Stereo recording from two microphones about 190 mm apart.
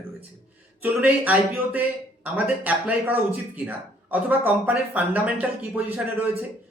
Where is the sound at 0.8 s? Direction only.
10° right (ahead or behind).